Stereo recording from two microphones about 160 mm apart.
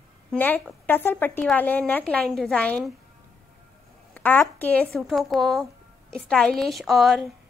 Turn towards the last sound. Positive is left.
turn(degrees=0)  # may be behind; listen again after turning